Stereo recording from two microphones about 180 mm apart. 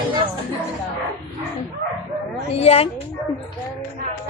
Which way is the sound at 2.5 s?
35° left (ahead or behind).